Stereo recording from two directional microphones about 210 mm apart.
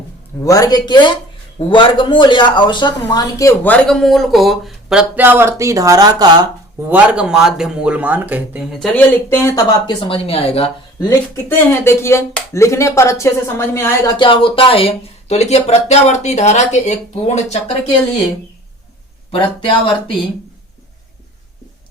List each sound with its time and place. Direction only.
0.4 s speech: 15° left (ahead or behind); by 8.9 s 5° right (ahead or behind)
9.0 s speech: 10° left (ahead or behind)
9.8 s speech: 25° left (ahead or behind)
11.4 s speech: 10° left (ahead or behind)
14.2 s speech: 25° left (ahead or behind)
19.3 s speech: 25° left (ahead or behind)